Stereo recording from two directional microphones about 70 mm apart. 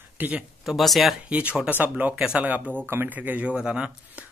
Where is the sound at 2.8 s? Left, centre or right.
Right; by 4.2 s centre.